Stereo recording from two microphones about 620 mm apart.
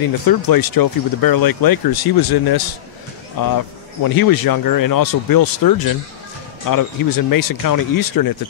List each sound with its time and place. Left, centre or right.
0.3 s speech: left